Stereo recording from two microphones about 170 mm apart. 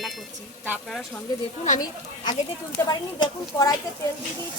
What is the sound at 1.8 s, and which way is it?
Speech, 25° left (ahead or behind).